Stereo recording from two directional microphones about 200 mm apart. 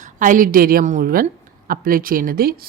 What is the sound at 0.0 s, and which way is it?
Speech, 40° right (ahead or behind).